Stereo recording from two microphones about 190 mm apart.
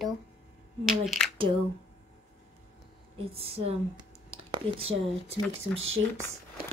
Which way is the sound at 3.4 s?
30° right (ahead or behind).